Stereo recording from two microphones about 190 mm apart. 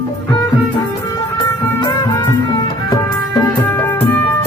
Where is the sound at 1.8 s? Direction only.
20° left (ahead or behind).